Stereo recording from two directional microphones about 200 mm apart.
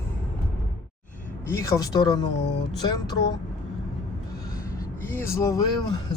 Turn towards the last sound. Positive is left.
turn(degrees=20)  # may be behind; listen again after turning